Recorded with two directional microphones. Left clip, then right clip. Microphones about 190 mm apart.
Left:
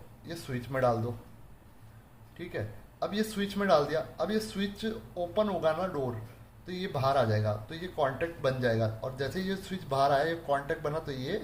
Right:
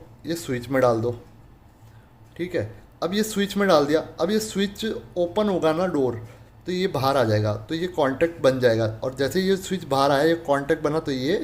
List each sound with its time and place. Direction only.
0.3 s speech: 45° right (ahead or behind)
2.4 s speech: 40° right (ahead or behind)